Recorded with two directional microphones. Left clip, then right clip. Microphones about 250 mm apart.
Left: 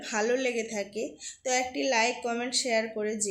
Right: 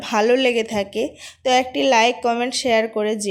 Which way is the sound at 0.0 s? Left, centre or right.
Right.